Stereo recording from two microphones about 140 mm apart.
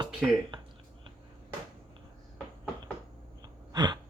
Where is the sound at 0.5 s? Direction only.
35° right (ahead or behind).